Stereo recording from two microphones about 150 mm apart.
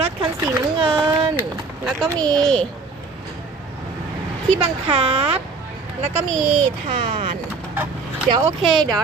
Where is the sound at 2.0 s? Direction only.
25° right (ahead or behind).